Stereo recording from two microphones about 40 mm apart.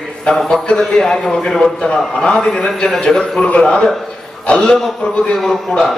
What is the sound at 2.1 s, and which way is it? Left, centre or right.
A man's voice, left.